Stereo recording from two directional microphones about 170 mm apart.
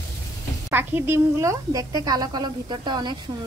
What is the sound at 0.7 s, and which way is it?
A woman's voice, 10° right (ahead or behind).